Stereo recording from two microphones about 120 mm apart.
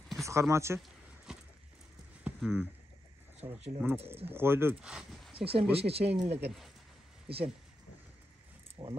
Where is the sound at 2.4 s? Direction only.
5° left (ahead or behind).